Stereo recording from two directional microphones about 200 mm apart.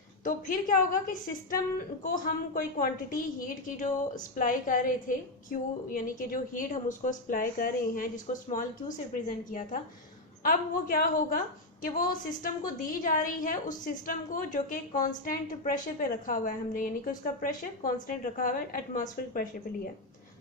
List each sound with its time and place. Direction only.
0.3 s a woman's voice: 45° left (ahead or behind)